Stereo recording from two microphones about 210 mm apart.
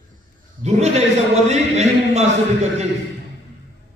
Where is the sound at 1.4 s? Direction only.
30° right (ahead or behind).